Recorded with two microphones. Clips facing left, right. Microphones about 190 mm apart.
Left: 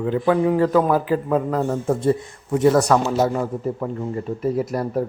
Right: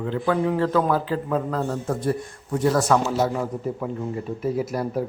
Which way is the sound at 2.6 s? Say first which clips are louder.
Left 4 dB; centre (ahead or behind).